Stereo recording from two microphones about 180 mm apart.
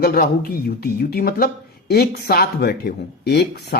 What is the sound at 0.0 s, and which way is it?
Speech, 60° left (ahead or behind).